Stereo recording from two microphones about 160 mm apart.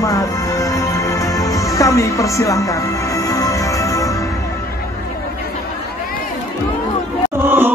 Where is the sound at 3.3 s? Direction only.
20° left (ahead or behind).